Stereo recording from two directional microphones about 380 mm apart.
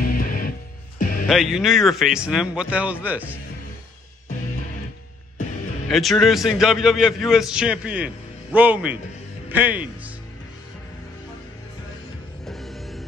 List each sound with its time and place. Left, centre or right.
0.0 s music: left
1.2 s a man's voice: centre
5.9 s a man's voice: centre
12.4 s music: centre